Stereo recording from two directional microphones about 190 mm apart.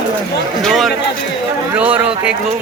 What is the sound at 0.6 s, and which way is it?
Speech, centre (ahead or behind).